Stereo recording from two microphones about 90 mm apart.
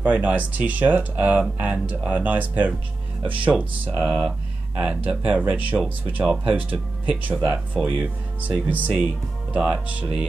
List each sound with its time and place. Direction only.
0.0 s speech: 20° right (ahead or behind)